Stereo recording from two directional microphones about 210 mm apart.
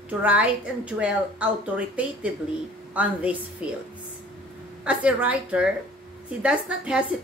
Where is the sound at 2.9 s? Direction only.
5° right (ahead or behind).